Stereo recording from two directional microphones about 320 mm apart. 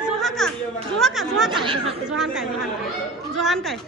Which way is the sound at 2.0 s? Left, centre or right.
Centre.